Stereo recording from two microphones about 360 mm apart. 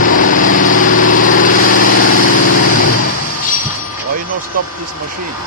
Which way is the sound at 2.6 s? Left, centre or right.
Left.